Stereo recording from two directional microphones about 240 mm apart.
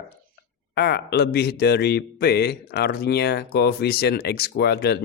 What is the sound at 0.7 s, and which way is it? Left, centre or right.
Speech, left.